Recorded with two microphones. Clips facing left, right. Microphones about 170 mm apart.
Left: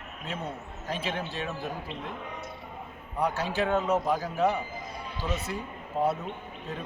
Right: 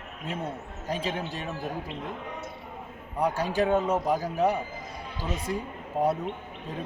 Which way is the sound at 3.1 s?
15° right (ahead or behind).